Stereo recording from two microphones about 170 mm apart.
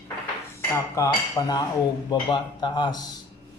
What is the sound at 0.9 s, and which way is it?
Speech, 20° left (ahead or behind).